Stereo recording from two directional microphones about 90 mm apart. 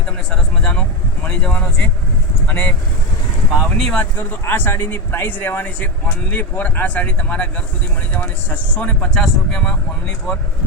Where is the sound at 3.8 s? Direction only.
5° left (ahead or behind).